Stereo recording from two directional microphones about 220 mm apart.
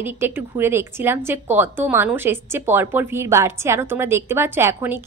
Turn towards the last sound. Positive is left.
turn(degrees=-10)  # may be behind; listen again after turning